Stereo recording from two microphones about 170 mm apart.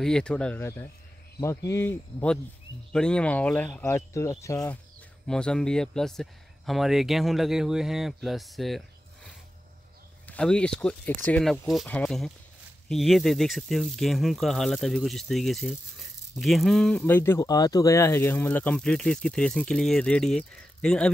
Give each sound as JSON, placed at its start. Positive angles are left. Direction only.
{"t": 0.0, "sound": "speech", "side_deg": 5}
{"t": 5.3, "sound": "speech", "side_deg": 5}